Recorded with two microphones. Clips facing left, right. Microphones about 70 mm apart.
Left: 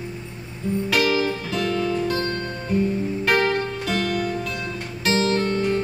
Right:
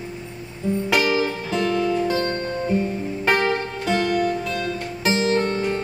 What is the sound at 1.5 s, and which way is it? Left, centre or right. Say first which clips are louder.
Music: right 4 dB; right.